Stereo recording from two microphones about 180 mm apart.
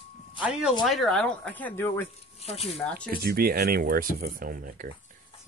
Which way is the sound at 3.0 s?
55° right (ahead or behind).